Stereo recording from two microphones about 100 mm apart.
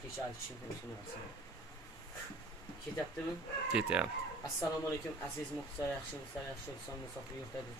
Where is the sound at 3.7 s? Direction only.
10° right (ahead or behind).